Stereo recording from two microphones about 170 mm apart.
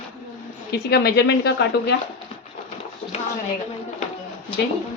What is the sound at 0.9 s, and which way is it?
Speech, 75° left (ahead or behind).